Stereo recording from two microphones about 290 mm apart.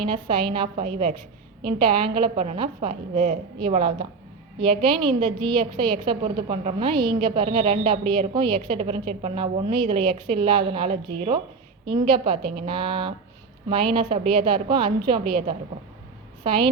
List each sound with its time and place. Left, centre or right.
0.0 s a woman's voice: centre
16.4 s a woman's voice: centre